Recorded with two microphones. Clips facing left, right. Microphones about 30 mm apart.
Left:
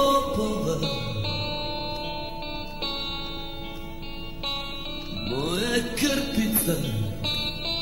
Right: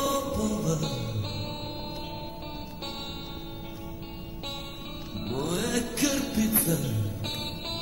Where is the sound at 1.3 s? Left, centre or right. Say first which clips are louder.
Left 6 dB; left.